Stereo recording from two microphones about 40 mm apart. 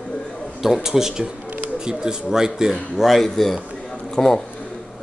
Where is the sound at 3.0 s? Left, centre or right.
Centre.